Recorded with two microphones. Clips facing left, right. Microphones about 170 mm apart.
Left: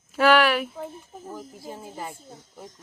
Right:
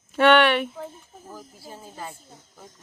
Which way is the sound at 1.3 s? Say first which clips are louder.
Left 4 dB; 20° left (ahead or behind).